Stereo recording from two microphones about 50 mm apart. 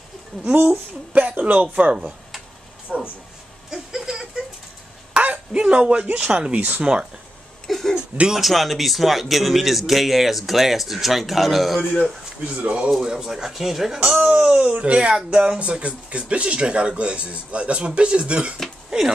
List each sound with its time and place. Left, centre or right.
0.3 s speech: centre
1.1 s speech: right
2.9 s speech: centre
3.7 s a sound: centre
5.5 s speech: centre
6.8 s speech: centre
7.6 s a sound: centre
7.9 s a sound: centre
8.4 s a man's voice: centre
12.5 s speech: right
13.0 s speech: centre
14.2 s speech: right
18.9 s a sound: centre